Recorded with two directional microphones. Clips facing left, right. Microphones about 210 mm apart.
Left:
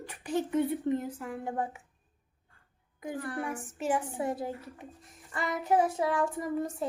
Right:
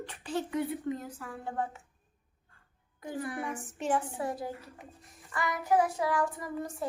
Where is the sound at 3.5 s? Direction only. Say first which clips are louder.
Left 1 dB; 5° left (ahead or behind).